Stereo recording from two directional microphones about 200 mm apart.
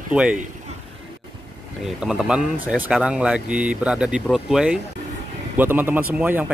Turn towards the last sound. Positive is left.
turn(degrees=-5)  # may be behind; listen again after turning